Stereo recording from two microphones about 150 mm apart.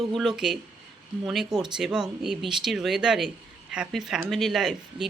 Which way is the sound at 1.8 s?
5° right (ahead or behind).